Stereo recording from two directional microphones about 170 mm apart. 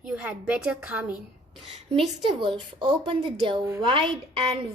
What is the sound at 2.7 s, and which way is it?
Speech, 30° right (ahead or behind).